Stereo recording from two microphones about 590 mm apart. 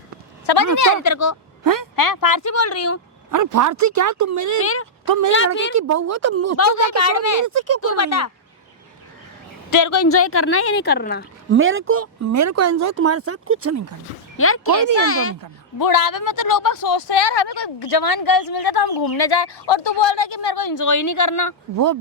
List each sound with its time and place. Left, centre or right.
0.4 s speech: left
1.6 s speech: right
2.0 s speech: left
3.3 s speech: right
6.6 s speech: left
7.4 s speech: right
7.8 s speech: left
9.6 s speech: left
11.5 s speech: centre
14.3 s speech: left
15.8 s speech: left